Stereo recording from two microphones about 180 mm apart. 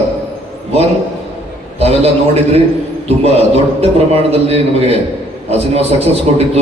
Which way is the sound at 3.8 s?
35° right (ahead or behind).